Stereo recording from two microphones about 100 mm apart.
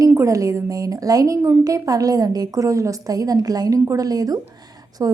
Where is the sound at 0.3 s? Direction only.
35° right (ahead or behind).